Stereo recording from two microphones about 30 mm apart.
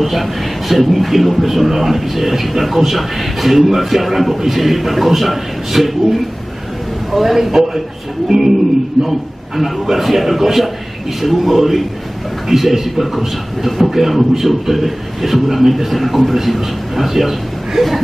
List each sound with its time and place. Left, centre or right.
0.0 s a man's voice: centre
9.0 s a man's voice: centre
9.6 s a man's voice: centre